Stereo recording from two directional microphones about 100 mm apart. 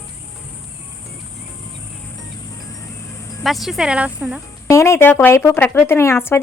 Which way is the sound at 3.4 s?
Centre (ahead or behind).